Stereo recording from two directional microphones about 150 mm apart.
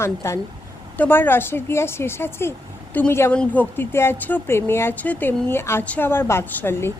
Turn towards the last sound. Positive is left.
turn(degrees=15)  # may be behind; listen again after turning